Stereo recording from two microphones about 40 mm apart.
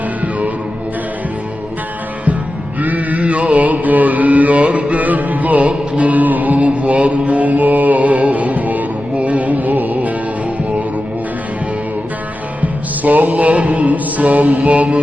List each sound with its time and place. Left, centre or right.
2.8 s chant: right
12.6 s music: right